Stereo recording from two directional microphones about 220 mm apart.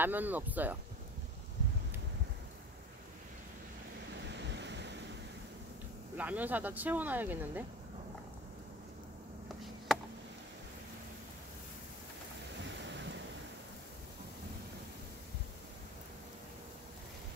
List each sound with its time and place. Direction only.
0.0 s speech: 10° right (ahead or behind)
4.3 s waves: 50° right (ahead or behind)
6.1 s speech: 5° right (ahead or behind)
12.6 s waves: 55° right (ahead or behind)